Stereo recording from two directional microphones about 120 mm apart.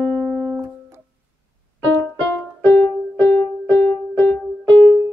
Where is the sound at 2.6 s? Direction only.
15° left (ahead or behind).